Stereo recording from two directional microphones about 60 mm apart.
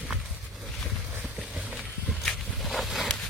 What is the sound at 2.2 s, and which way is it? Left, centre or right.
Walk, centre.